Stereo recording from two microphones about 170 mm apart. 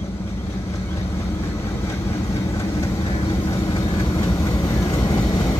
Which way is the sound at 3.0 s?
35° left (ahead or behind).